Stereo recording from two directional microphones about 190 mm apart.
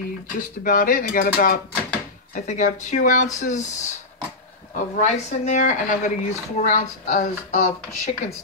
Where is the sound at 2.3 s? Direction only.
40° left (ahead or behind).